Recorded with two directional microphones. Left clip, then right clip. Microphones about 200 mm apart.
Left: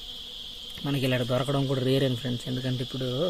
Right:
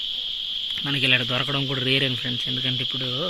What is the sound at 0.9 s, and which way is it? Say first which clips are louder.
Speech: right 6 dB; 25° left (ahead or behind).